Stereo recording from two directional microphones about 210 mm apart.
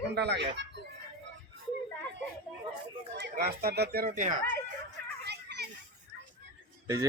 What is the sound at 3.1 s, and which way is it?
Speech, 50° right (ahead or behind).